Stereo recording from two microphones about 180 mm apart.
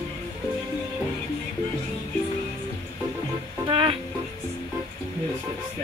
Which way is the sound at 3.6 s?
30° right (ahead or behind).